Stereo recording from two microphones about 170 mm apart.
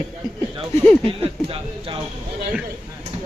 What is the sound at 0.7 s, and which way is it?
Speech, 15° left (ahead or behind).